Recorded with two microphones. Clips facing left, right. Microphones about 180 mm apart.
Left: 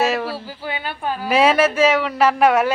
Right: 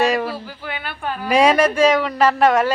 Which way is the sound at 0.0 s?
Centre (ahead or behind).